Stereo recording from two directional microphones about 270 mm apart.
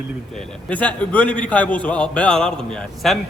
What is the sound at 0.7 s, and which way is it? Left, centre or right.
A man's voice, centre.